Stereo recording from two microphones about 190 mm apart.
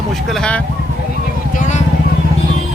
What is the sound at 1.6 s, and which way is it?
Vehicle, 40° left (ahead or behind).